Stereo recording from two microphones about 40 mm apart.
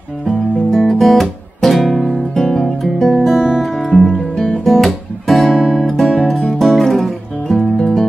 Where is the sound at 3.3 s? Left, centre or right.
Left.